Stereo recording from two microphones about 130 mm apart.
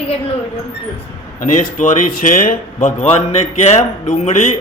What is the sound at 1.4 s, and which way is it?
A man's voice, 75° left (ahead or behind).